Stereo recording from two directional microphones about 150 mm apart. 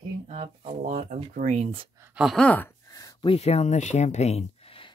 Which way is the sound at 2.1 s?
Centre (ahead or behind).